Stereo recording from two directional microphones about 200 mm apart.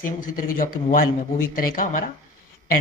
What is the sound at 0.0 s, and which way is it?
Speech, 45° left (ahead or behind).